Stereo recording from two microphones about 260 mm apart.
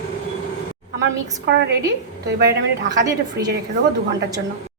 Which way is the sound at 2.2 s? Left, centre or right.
Right.